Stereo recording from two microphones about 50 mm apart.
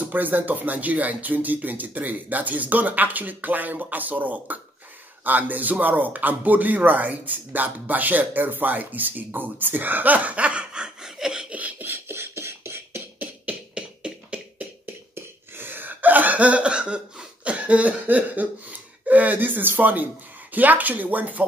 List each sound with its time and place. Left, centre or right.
0.0 s a man's voice: right; by 11.4 s centre
11.5 s a sound: right
11.9 s beatboxing: right
13.2 s beatboxing: right
15.1 s cough: right
20.5 s a man's voice: right